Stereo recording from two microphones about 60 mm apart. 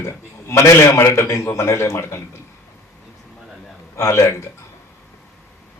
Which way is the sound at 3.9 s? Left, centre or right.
Left.